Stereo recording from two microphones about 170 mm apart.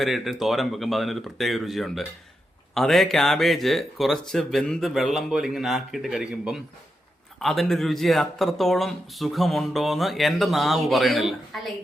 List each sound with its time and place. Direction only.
0.0 s speech: centre (ahead or behind)